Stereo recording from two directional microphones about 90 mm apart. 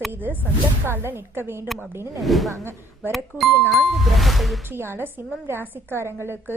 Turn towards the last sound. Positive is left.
turn(degrees=-25)  # may be behind; listen again after turning